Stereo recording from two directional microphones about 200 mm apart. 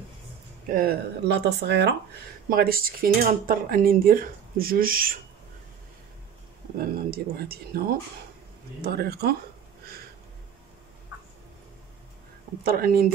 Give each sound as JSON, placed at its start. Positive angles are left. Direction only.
{"t": 0.7, "sound": "speech", "side_deg": -50}
{"t": 6.8, "sound": "speech", "side_deg": -50}
{"t": 8.8, "sound": "speech", "side_deg": -50}
{"t": 12.6, "sound": "speech", "side_deg": -50}